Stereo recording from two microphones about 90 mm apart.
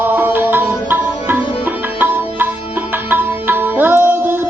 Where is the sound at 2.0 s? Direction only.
25° right (ahead or behind).